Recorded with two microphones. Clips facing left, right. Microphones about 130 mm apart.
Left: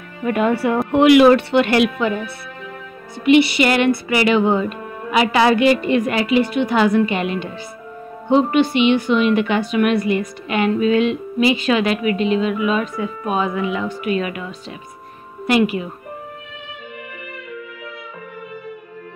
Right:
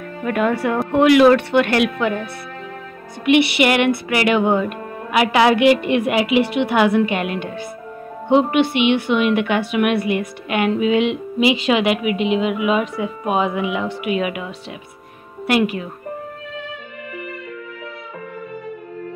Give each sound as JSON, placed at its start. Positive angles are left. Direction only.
{"t": 0.2, "sound": "speech", "side_deg": 5}
{"t": 3.3, "sound": "music", "side_deg": -65}
{"t": 3.6, "sound": "a woman's voice", "side_deg": -5}
{"t": 5.6, "sound": "a woman's voice", "side_deg": -80}
{"t": 5.9, "sound": "a woman's voice", "side_deg": -10}
{"t": 6.4, "sound": "a woman's voice", "side_deg": -80}
{"t": 6.7, "sound": "a woman's voice", "side_deg": -5}
{"t": 8.5, "sound": "a woman's voice", "side_deg": -65}
{"t": 9.0, "sound": "a woman's voice", "side_deg": -5}
{"t": 11.1, "sound": "a woman's voice", "side_deg": -15}
{"t": 15.4, "sound": "a woman's voice", "side_deg": 0}